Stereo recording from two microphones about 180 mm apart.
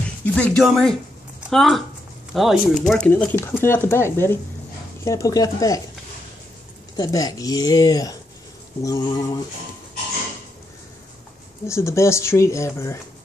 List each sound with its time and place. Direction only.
0.2 s speech: 10° left (ahead or behind)
7.0 s speech: 20° left (ahead or behind)
11.6 s speech: 15° left (ahead or behind)